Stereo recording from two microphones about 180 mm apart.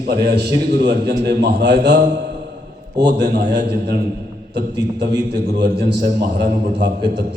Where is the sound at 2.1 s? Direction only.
70° right (ahead or behind).